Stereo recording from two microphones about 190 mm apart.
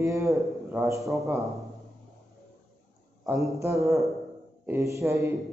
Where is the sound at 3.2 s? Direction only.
15° right (ahead or behind).